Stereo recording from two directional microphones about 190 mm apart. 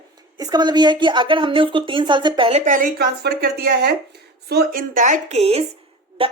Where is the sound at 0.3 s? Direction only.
20° right (ahead or behind).